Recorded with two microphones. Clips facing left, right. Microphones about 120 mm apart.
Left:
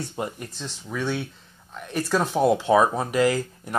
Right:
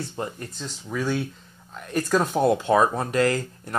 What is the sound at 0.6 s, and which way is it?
Speech, centre (ahead or behind).